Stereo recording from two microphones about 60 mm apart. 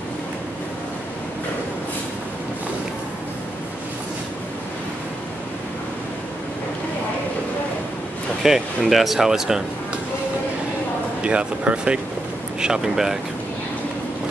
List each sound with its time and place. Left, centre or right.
8.4 s speech: centre
11.2 s speech: centre